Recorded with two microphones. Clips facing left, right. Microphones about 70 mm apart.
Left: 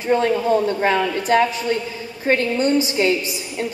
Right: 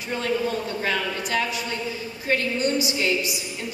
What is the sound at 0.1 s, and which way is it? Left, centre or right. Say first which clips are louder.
A woman's voice: left 8 dB; left.